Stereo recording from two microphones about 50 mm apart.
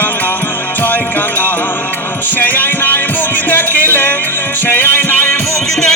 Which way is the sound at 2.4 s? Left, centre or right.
Left.